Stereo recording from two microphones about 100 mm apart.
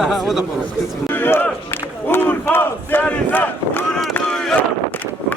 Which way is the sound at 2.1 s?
20° left (ahead or behind).